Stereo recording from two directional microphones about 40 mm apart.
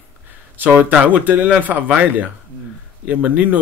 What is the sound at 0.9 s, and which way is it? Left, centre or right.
Speech, right.